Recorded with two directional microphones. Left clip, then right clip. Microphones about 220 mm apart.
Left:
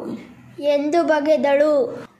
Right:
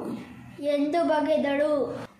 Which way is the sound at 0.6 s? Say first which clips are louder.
Left 7 dB; 50° left (ahead or behind).